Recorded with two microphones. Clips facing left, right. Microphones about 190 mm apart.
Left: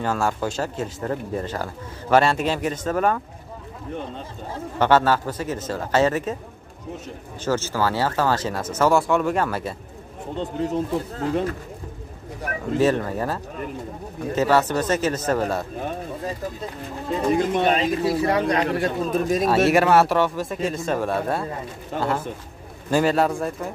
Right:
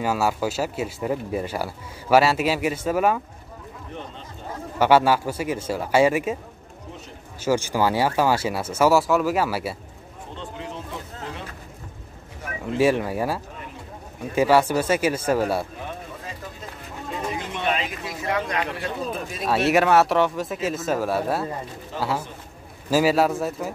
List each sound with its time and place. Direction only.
0.0 s speech: 10° right (ahead or behind)
4.7 s speech: 10° right (ahead or behind)
7.4 s speech: 15° right (ahead or behind)
10.6 s speech: 40° left (ahead or behind)
12.7 s speech: 10° right (ahead or behind)
17.3 s speech: 40° left (ahead or behind)
19.4 s speech: centre (ahead or behind)
22.8 s speech: 5° right (ahead or behind)